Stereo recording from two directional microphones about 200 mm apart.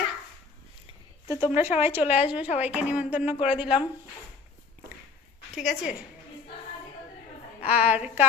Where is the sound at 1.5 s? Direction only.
10° right (ahead or behind).